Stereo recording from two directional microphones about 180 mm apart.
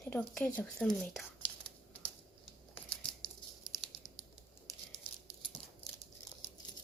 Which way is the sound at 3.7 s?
Centre (ahead or behind).